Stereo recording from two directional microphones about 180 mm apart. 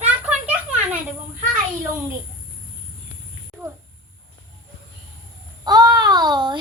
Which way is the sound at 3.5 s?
Centre (ahead or behind).